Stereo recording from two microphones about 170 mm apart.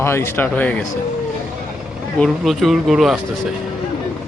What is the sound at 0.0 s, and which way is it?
Speech, 15° left (ahead or behind).